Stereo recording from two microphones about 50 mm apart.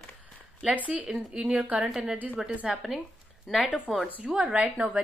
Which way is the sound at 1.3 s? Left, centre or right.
Right.